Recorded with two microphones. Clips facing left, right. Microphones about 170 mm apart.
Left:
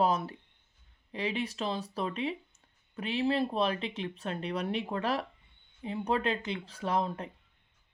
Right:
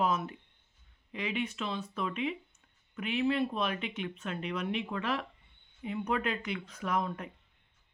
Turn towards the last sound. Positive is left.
turn(degrees=30)  # may be behind; listen again after turning